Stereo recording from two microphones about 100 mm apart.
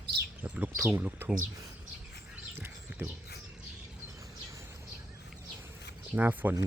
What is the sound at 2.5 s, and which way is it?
Horse, 20° right (ahead or behind).